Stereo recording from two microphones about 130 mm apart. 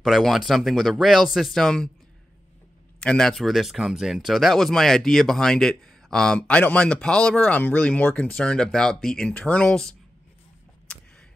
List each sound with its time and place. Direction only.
0.0 s speech: centre (ahead or behind)
3.0 s speech: 5° left (ahead or behind)